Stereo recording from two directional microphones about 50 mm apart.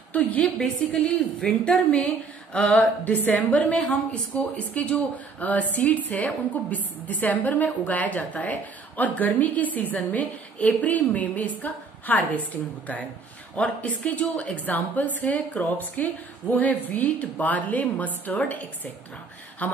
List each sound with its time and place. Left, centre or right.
0.1 s speech: left
1.0 s a woman's voice: centre
2.5 s speech: left